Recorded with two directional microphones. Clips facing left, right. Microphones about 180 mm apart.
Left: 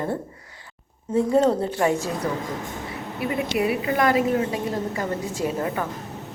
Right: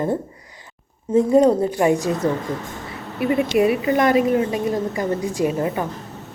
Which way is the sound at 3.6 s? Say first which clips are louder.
Right 3 dB; 25° right (ahead or behind).